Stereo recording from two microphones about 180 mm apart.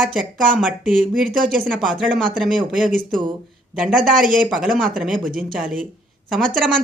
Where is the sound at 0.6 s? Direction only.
5° right (ahead or behind).